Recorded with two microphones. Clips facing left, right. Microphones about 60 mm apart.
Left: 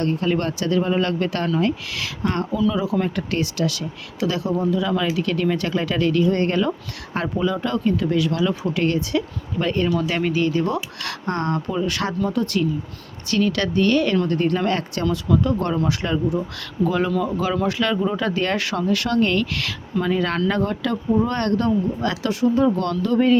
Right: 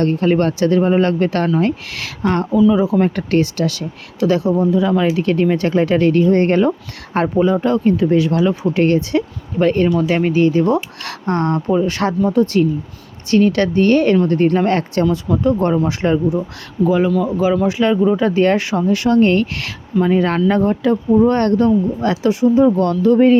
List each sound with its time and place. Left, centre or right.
0.0 s speech: right
3.2 s speech: right
16.8 s speech: centre
17.7 s speech: centre